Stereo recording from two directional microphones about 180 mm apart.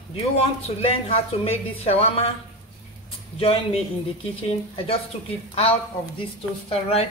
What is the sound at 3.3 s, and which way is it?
Speech, 30° left (ahead or behind).